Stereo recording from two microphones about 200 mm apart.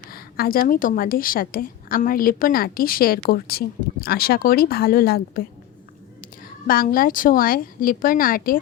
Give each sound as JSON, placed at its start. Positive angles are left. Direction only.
{"t": 0.1, "sound": "a woman's voice", "side_deg": 50}
{"t": 6.7, "sound": "a woman's voice", "side_deg": 45}